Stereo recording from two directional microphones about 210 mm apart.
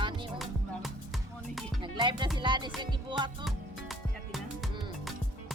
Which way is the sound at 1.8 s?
20° right (ahead or behind).